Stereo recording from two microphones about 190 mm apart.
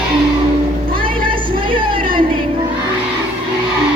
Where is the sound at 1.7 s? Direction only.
25° right (ahead or behind).